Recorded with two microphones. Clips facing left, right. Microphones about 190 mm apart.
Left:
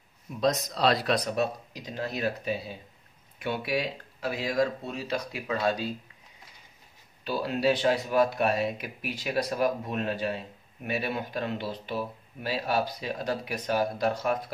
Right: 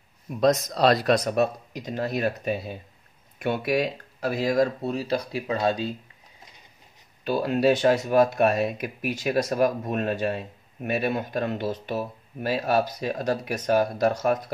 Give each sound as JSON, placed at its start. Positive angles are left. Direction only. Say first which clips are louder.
{"t": 0.4, "sound": "speech", "louder": "right 5 dB", "side_deg": -50}
{"t": 7.2, "sound": "speech", "louder": "right 5 dB", "side_deg": -50}